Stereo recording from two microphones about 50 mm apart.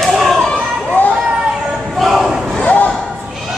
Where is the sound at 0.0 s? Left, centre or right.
Centre.